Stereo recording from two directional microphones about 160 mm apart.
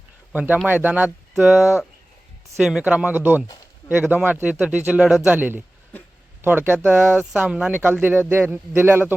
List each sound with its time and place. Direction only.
0.3 s speech: 10° right (ahead or behind)